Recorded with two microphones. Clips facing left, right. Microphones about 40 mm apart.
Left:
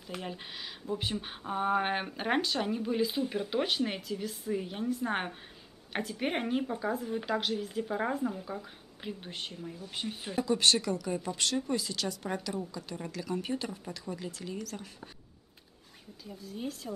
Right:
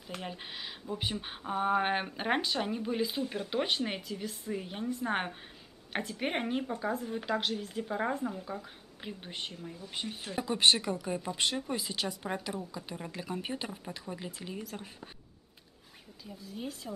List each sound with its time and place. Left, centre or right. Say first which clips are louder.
0.0 s speech: left 1 dB; centre
10.4 s speech: even; right
11.1 s speech: left 1 dB; centre
11.7 s speech: left 2 dB; right
13.1 s speech: left 4 dB; right
16.3 s speech: left 2 dB; centre